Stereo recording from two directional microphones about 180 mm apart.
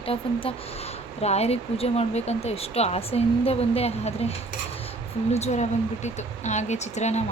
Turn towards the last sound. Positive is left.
turn(degrees=40)  # may be behind; listen again after turning